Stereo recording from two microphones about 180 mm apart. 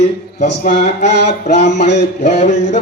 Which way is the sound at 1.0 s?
70° left (ahead or behind).